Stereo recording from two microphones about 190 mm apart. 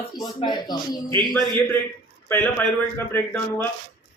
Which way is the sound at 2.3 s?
10° left (ahead or behind).